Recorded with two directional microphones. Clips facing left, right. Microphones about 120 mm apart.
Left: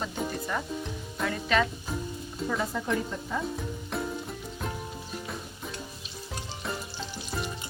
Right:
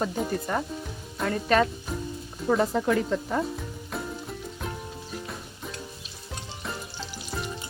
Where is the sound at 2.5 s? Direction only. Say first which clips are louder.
Right 7 dB; 60° right (ahead or behind).